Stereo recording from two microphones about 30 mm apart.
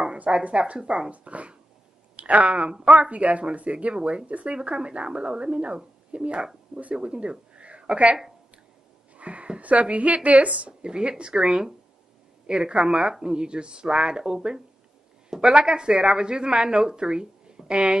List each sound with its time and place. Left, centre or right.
0.3 s a woman's voice: right
9.1 s a sound: right
9.6 s a woman's voice: right
10.8 s a woman's voice: right